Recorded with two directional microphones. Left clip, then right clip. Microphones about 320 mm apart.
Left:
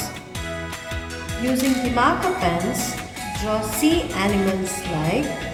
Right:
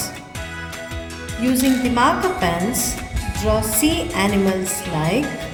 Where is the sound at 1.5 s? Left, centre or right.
Right.